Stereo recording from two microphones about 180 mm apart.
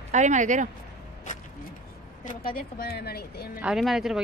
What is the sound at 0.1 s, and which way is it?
Speech, 40° right (ahead or behind).